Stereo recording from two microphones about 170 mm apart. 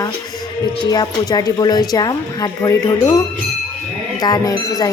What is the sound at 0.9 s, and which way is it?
Speech, 25° left (ahead or behind).